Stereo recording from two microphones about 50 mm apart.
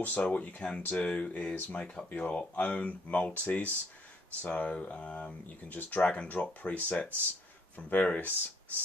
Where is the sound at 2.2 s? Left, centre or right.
Left.